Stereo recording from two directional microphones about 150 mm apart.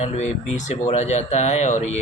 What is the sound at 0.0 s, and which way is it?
Speech, 50° left (ahead or behind).